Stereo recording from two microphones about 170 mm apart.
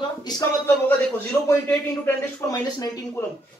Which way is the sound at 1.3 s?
10° left (ahead or behind).